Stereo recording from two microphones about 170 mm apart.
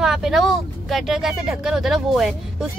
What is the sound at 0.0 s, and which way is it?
Speech, centre (ahead or behind).